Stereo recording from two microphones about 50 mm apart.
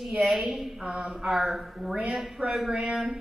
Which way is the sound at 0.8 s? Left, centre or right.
Right.